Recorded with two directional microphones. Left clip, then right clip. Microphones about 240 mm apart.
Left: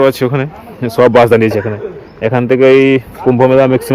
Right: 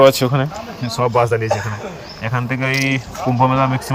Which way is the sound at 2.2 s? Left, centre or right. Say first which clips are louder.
Left 13 dB; left.